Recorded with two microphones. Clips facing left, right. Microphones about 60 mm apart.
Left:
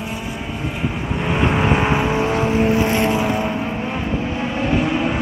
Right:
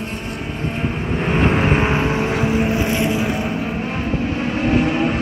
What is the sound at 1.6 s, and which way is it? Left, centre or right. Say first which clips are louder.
Vehicle: even; centre.